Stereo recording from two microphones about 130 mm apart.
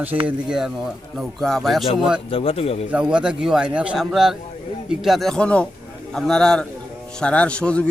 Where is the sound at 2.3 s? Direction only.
45° left (ahead or behind).